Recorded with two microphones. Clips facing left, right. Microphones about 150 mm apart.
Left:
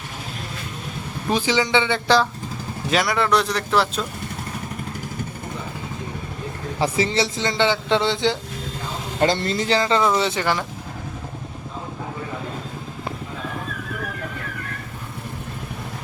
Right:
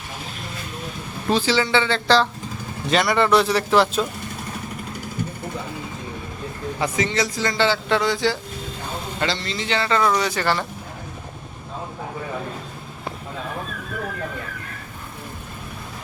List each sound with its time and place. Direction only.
1.3 s speech: 15° left (ahead or behind)
2.9 s speech: centre (ahead or behind)
6.7 s a man's voice: 30° left (ahead or behind)
9.2 s speech: 50° left (ahead or behind)
10.2 s a man's voice: 25° left (ahead or behind)